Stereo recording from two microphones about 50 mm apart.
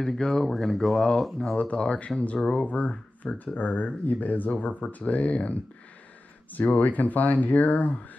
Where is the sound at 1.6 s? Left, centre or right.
Left.